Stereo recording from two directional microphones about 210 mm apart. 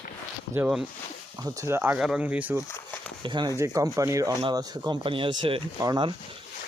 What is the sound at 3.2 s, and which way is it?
Speech, 20° right (ahead or behind).